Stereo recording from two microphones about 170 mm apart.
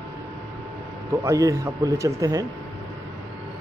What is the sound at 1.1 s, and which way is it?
A man's voice, 20° right (ahead or behind).